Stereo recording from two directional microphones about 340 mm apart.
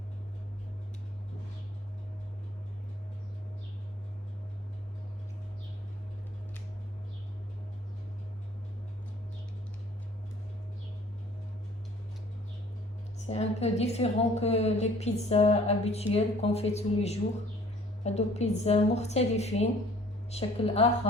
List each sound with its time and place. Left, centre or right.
13.2 s a woman's voice: centre